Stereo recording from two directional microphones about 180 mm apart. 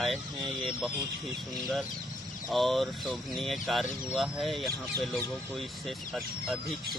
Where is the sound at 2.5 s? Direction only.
Centre (ahead or behind).